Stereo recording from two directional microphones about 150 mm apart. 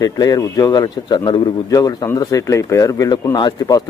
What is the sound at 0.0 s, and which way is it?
Speech, 25° left (ahead or behind).